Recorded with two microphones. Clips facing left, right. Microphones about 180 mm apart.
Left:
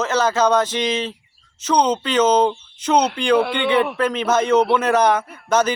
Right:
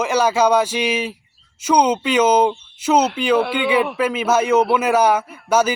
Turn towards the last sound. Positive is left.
turn(degrees=-10)  # may be behind; listen again after turning